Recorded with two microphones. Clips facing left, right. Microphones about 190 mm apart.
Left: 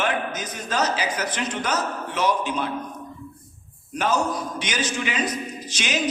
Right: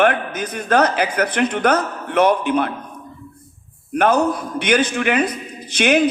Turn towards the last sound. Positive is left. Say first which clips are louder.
# right 11 dB
turn(degrees=-60)  # may be behind; listen again after turning